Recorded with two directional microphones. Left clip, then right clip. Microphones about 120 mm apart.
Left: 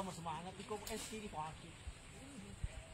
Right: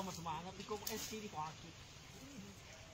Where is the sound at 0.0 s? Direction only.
20° right (ahead or behind).